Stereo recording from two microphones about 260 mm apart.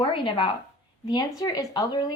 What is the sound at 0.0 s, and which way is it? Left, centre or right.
Speech, centre.